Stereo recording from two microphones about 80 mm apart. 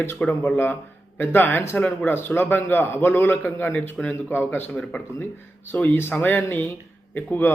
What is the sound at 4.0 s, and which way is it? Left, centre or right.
Speech, centre.